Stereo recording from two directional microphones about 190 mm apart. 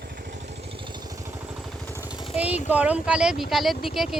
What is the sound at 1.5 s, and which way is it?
Vehicle, centre (ahead or behind).